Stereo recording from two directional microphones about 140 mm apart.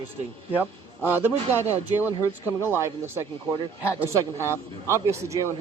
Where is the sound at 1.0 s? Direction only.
15° right (ahead or behind).